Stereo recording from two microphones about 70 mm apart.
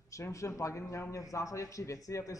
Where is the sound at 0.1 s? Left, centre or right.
Left.